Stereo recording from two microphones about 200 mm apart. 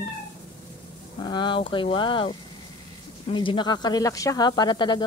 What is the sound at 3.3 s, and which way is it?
Speech, 20° left (ahead or behind).